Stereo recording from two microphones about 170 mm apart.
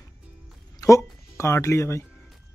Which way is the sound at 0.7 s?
20° left (ahead or behind).